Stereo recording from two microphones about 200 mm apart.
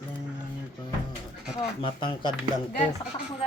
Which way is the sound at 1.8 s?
25° left (ahead or behind).